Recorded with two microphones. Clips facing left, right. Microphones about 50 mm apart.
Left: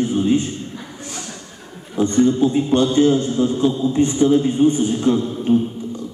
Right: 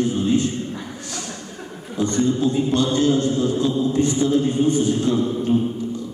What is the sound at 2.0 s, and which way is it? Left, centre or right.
A man's voice, left.